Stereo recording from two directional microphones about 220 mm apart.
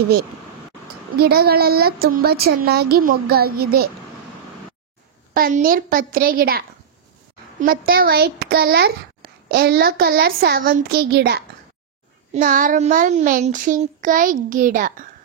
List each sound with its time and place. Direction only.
1.1 s speech: 45° right (ahead or behind)
5.3 s child singing: 40° right (ahead or behind)
7.6 s speech: 40° right (ahead or behind)
12.4 s child singing: 40° right (ahead or behind)